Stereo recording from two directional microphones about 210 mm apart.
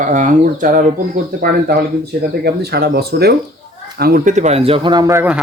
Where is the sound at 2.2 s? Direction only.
50° right (ahead or behind); by 5.4 s 10° right (ahead or behind).